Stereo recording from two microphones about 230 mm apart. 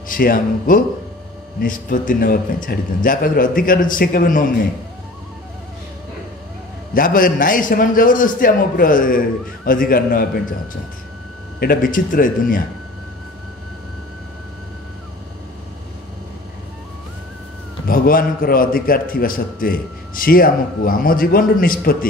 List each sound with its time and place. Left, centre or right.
0.1 s a man's voice: left
6.9 s a man's voice: left
11.6 s a man's voice: left
17.8 s a man's voice: left